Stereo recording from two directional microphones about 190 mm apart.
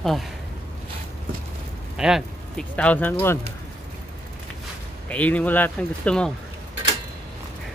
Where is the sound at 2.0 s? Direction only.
Centre (ahead or behind).